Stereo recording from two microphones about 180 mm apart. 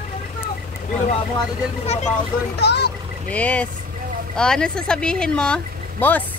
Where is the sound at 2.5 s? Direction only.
65° left (ahead or behind).